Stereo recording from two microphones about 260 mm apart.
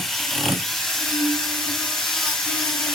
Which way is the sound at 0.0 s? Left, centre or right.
Centre.